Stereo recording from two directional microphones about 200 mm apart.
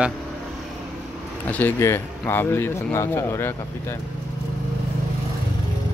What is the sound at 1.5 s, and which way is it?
Speech, 10° left (ahead or behind).